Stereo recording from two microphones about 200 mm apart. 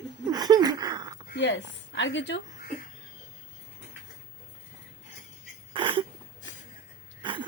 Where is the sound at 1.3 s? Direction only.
65° left (ahead or behind).